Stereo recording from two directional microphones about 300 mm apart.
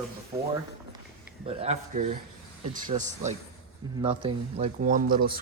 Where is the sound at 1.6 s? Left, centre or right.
Right.